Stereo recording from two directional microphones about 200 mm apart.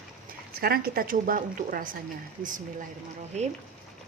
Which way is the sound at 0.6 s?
50° right (ahead or behind).